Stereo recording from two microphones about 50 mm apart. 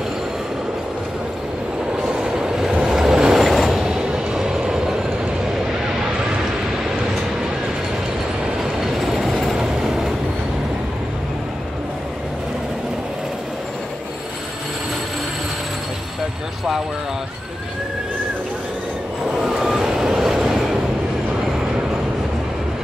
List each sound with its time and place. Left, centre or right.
2.0 s vehicle: centre
3.8 s train: centre
8.7 s train: centre
19.3 s vehicle: centre